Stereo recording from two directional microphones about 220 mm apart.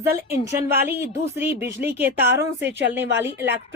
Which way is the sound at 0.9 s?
10° right (ahead or behind).